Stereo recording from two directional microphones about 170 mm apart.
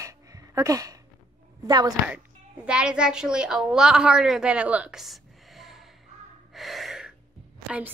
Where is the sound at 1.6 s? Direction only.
25° right (ahead or behind).